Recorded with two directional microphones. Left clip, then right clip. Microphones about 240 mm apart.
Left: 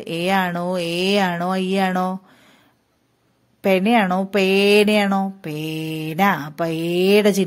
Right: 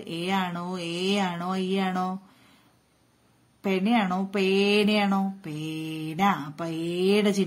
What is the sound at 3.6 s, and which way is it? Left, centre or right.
Speech, left.